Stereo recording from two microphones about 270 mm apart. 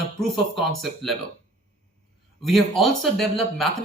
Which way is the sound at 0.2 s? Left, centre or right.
Centre.